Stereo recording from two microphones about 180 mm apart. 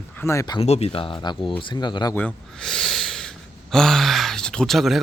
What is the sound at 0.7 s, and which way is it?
Speech, 35° left (ahead or behind).